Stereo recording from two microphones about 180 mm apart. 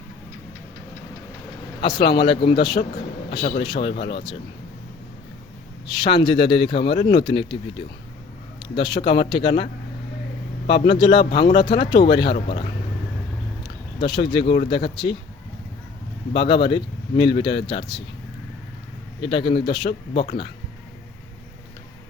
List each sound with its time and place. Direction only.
2.0 s speech: 30° left (ahead or behind)
5.8 s a man's voice: 25° left (ahead or behind)
8.6 s speech: 25° left (ahead or behind)
10.9 s speech: 25° left (ahead or behind)
14.0 s speech: 25° left (ahead or behind)
16.3 s speech: 30° left (ahead or behind)
19.2 s speech: 25° left (ahead or behind)